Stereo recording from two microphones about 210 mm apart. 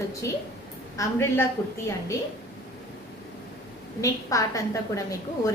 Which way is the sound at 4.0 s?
15° left (ahead or behind).